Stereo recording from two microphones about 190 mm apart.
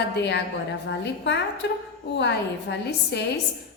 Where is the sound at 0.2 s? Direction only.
65° left (ahead or behind).